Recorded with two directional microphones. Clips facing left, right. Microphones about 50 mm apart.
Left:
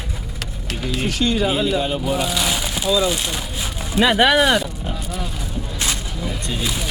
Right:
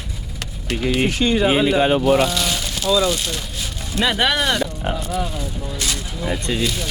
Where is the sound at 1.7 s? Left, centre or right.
Right.